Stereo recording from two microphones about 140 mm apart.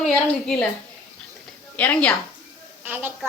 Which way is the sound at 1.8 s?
10° left (ahead or behind).